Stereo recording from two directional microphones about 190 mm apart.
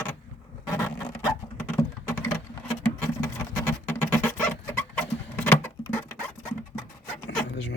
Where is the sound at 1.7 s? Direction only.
15° left (ahead or behind).